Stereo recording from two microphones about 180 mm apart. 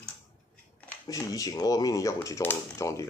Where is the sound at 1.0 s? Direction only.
20° left (ahead or behind).